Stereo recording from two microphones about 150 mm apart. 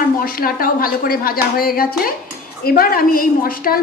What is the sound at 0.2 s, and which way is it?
A woman's voice, 75° left (ahead or behind).